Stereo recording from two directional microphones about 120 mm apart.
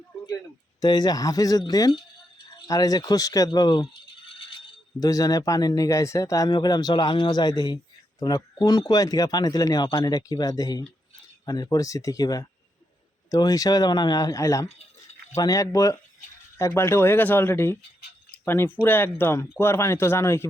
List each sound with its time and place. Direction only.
0.8 s speech: 35° left (ahead or behind)
4.9 s speech: 30° left (ahead or behind)